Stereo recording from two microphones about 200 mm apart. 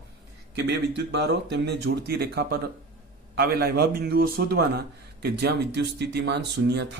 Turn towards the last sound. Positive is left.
turn(degrees=-60)  # may be behind; listen again after turning